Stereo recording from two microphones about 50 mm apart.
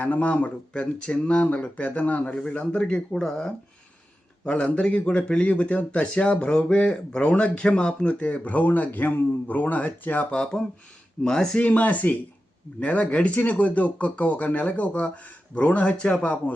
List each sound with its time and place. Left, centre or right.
0.0 s speech: left
2.2 s speech: left
4.4 s speech: left
10.3 s speech: centre
11.6 s speech: left